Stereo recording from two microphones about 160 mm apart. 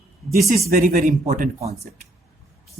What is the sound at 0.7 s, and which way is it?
Speech, 65° right (ahead or behind).